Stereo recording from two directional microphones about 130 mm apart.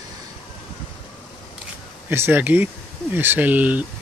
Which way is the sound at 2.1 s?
15° right (ahead or behind).